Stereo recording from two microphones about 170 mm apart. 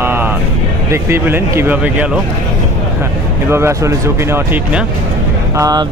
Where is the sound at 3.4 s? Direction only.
15° right (ahead or behind).